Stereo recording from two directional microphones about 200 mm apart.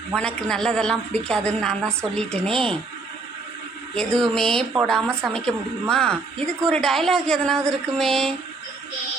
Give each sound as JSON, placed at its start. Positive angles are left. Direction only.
{"t": 0.1, "sound": "a woman's voice", "side_deg": 5}
{"t": 3.9, "sound": "a woman's voice", "side_deg": 5}